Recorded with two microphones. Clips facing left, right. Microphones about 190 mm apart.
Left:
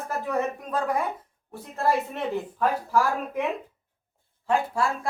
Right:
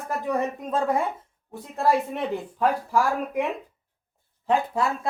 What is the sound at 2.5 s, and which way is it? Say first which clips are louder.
Speech: right 2 dB; 15° right (ahead or behind).